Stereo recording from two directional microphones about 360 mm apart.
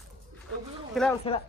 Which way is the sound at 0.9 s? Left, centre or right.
Centre.